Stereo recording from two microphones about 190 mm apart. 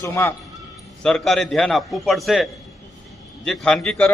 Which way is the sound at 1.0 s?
Centre (ahead or behind).